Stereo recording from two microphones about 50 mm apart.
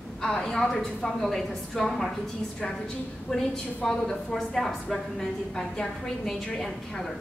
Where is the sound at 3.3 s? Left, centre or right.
Centre.